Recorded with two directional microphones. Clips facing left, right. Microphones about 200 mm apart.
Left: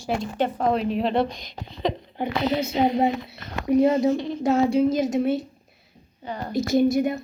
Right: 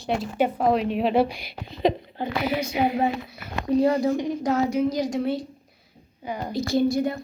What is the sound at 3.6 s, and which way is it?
A woman's voice, 20° left (ahead or behind).